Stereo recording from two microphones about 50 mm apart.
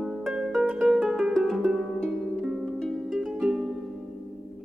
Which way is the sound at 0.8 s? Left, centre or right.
Centre.